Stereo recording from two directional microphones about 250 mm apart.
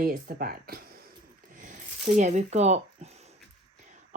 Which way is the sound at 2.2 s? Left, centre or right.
Right.